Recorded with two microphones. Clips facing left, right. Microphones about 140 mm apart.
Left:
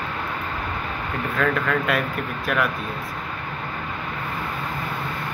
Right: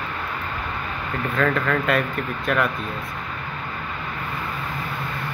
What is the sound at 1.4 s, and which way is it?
Speech, centre (ahead or behind).